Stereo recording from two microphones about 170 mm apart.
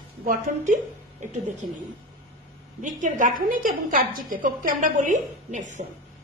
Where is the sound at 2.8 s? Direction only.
50° right (ahead or behind).